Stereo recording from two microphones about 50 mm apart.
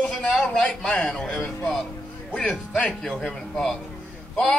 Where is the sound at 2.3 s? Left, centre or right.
Left.